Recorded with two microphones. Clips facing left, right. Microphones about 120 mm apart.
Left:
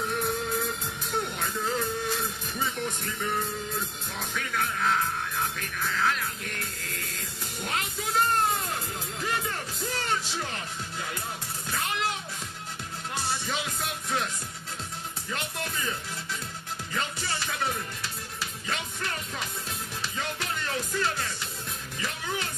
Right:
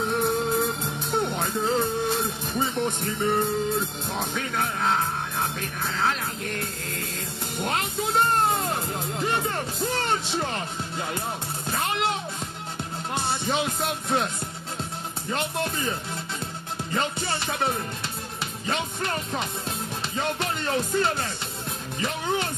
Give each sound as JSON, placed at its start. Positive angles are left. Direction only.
{"t": 0.1, "sound": "music", "side_deg": -25}
{"t": 7.5, "sound": "speech", "side_deg": -25}
{"t": 9.2, "sound": "music", "side_deg": -30}
{"t": 13.1, "sound": "music", "side_deg": -25}
{"t": 15.5, "sound": "music", "side_deg": -25}